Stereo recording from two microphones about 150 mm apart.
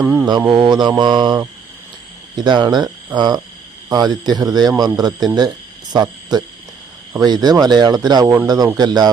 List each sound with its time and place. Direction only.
0.0 s mantra: 5° right (ahead or behind)
0.5 s speech: 30° right (ahead or behind)